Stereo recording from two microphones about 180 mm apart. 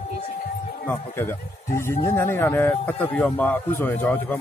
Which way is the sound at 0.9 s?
10° left (ahead or behind).